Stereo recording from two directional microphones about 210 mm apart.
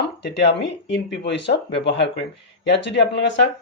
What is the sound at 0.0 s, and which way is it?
Speech, 50° left (ahead or behind).